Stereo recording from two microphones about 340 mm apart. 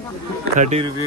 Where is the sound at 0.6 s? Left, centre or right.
Centre.